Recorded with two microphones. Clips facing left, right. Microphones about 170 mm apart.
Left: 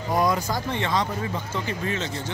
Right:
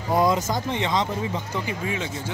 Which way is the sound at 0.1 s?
25° right (ahead or behind).